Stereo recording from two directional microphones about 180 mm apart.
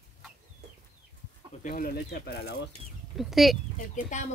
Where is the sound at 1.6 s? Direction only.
55° left (ahead or behind).